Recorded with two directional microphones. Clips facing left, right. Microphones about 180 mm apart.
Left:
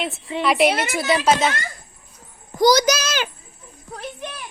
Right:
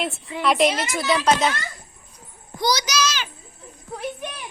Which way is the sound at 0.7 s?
60° left (ahead or behind).